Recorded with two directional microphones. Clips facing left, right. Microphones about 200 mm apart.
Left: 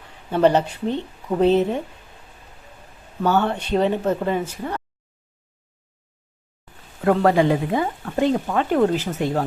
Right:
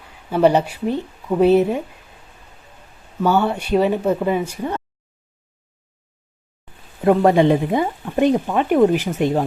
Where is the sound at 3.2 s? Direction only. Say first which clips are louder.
Right 2 dB; 10° right (ahead or behind).